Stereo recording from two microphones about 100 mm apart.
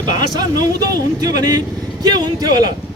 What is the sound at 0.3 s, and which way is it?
A man's voice, 40° right (ahead or behind).